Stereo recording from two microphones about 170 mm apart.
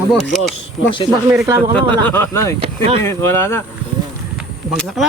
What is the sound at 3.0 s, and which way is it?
Speech, 15° left (ahead or behind).